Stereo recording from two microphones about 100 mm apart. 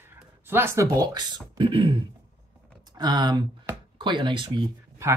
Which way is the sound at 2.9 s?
45° right (ahead or behind).